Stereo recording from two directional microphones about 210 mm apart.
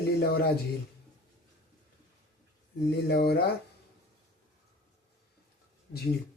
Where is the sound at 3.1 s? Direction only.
45° left (ahead or behind).